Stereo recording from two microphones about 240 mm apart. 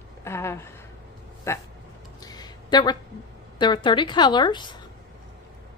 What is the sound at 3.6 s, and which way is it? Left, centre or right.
A woman's voice, centre.